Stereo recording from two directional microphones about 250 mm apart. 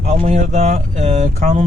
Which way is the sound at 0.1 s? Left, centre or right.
Right.